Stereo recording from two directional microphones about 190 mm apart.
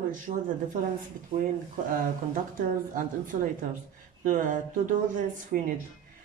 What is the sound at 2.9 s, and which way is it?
Speech, 45° right (ahead or behind).